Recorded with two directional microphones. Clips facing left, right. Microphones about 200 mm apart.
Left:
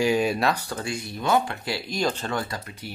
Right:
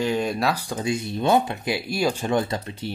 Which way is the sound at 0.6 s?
15° right (ahead or behind).